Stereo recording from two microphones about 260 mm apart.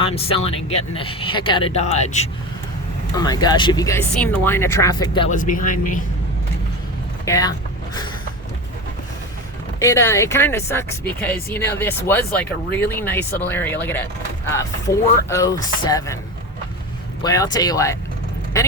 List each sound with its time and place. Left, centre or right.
0.0 s speech: left
5.3 s a man's voice: left
7.3 s speech: centre
9.8 s speech: centre
17.2 s speech: centre